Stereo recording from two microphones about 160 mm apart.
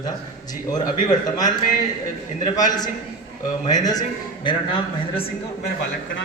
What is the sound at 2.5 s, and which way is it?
Speech, 25° left (ahead or behind).